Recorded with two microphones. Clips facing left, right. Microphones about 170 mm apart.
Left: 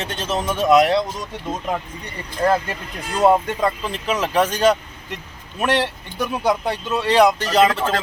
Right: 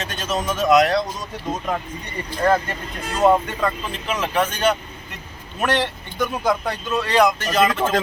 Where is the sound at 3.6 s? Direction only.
35° left (ahead or behind).